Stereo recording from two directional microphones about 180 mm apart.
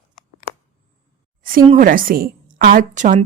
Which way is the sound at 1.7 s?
50° right (ahead or behind).